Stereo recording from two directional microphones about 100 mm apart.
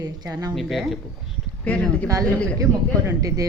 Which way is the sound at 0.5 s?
Centre (ahead or behind).